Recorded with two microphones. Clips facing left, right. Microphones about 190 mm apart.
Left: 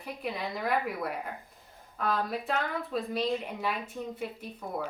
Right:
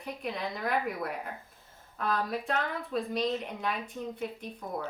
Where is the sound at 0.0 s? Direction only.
Centre (ahead or behind).